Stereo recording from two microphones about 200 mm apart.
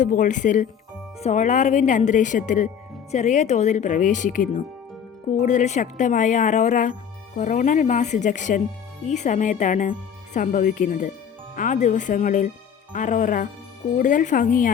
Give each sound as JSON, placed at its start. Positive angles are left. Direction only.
{"t": 0.0, "sound": "a woman's voice", "side_deg": 40}